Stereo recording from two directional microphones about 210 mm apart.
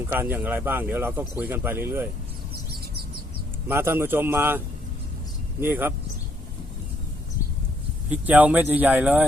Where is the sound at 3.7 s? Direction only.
10° right (ahead or behind).